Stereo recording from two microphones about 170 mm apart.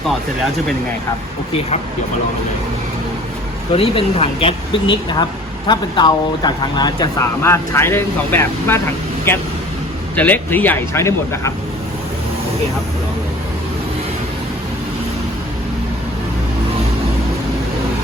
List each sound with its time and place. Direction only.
3.7 s speech: 35° left (ahead or behind); by 8.8 s 15° left (ahead or behind)
10.2 s speech: 10° left (ahead or behind)